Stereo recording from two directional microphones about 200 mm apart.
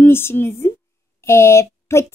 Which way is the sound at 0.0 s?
10° left (ahead or behind).